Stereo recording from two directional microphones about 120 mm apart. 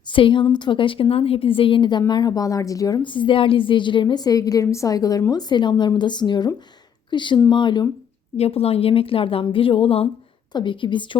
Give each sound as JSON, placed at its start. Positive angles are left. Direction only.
{"t": 0.1, "sound": "a woman's voice", "side_deg": 45}
{"t": 3.0, "sound": "speech", "side_deg": 45}
{"t": 8.4, "sound": "a woman's voice", "side_deg": 55}